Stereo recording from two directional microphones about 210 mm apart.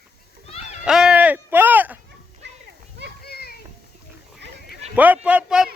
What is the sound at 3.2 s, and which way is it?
Children playing, 50° left (ahead or behind).